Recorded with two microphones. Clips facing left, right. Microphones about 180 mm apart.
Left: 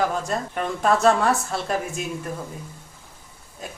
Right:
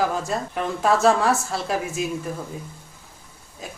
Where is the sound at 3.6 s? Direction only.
Centre (ahead or behind).